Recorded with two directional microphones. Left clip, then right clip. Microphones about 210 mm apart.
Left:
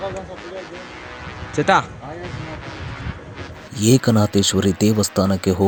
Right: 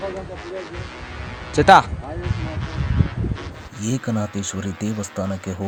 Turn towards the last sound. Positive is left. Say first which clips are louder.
# left 9 dB
turn(degrees=40)  # may be behind; listen again after turning